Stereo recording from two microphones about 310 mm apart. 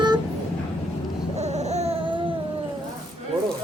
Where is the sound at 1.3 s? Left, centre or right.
Right.